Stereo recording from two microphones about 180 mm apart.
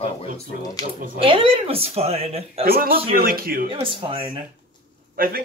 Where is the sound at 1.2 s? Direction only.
30° right (ahead or behind).